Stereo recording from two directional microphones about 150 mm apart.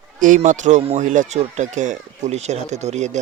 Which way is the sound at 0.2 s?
60° right (ahead or behind).